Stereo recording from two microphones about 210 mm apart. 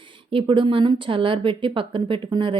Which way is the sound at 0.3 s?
25° right (ahead or behind).